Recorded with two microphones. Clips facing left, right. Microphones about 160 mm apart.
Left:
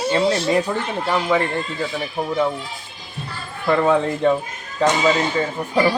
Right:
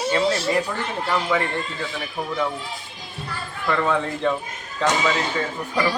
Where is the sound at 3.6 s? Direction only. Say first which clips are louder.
Left 5 dB; 20° left (ahead or behind).